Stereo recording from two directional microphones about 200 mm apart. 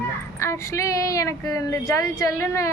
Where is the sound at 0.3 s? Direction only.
15° left (ahead or behind).